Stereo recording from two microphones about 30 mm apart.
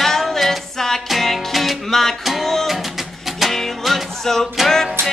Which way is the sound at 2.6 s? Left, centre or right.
Centre.